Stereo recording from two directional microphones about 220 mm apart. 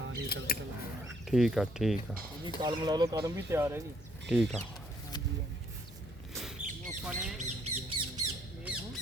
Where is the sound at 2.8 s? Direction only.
15° right (ahead or behind).